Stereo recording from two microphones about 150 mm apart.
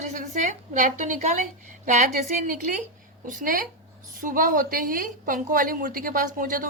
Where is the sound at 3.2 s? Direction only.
65° right (ahead or behind).